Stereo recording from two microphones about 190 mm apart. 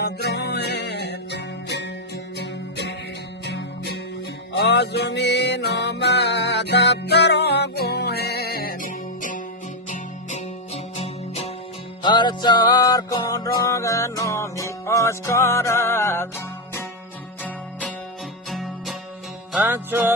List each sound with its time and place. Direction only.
0.0 s music: 60° left (ahead or behind); by 16.3 s 15° left (ahead or behind)
17.4 s music: 5° left (ahead or behind)
19.5 s music: 10° right (ahead or behind)